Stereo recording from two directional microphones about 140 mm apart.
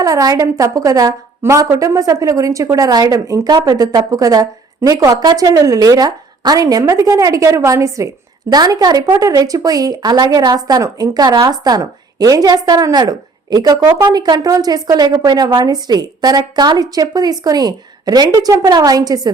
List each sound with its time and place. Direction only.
0.0 s a woman's voice: 25° right (ahead or behind)